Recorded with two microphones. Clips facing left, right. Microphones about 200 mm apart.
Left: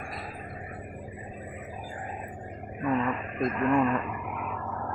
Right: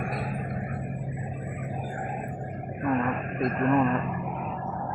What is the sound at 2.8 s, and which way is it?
Speech, 50° right (ahead or behind).